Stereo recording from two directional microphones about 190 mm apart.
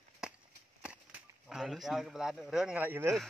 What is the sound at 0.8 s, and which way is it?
Speech, 5° right (ahead or behind).